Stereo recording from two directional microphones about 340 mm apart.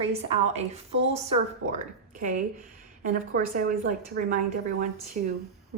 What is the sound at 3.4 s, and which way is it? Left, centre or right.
Speech, right.